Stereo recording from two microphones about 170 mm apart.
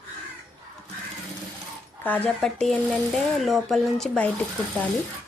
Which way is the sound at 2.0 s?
10° left (ahead or behind).